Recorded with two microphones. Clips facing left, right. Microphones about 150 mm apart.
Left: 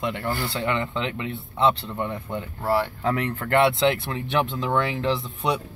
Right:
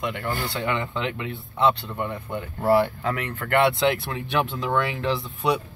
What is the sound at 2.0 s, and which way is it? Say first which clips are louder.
Speech: even; 10° right (ahead or behind).